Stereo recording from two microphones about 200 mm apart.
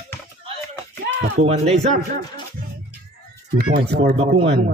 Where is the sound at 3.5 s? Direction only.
50° right (ahead or behind).